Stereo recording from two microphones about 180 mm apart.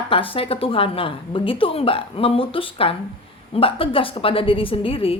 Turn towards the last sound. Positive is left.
turn(degrees=30)  # may be behind; listen again after turning